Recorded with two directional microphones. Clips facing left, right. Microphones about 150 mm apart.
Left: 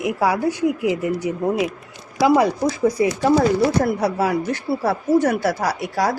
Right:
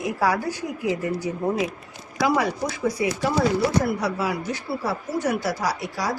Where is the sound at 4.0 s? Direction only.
55° left (ahead or behind).